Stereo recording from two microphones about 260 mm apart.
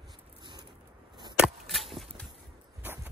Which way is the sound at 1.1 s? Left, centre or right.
Centre.